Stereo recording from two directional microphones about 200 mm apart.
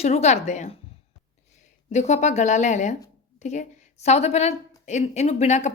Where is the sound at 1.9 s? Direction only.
35° left (ahead or behind).